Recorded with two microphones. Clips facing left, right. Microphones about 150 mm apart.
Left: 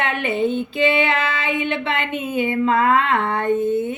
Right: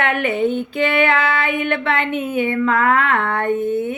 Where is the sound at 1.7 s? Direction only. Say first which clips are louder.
Right 3 dB; 55° right (ahead or behind).